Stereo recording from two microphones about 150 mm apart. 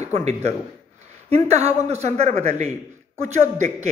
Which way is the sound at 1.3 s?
45° right (ahead or behind).